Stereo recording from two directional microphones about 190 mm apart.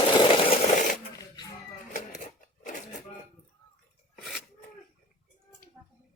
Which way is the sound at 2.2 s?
40° left (ahead or behind).